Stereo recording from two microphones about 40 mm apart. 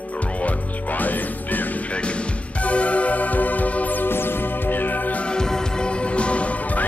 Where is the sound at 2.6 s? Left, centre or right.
Left.